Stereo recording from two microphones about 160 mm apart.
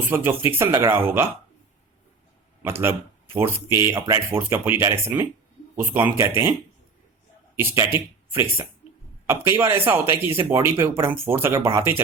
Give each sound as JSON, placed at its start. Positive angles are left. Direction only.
{"t": 0.1, "sound": "speech", "side_deg": -15}
{"t": 2.6, "sound": "speech", "side_deg": -15}
{"t": 7.5, "sound": "speech", "side_deg": -15}
{"t": 9.2, "sound": "speech", "side_deg": -15}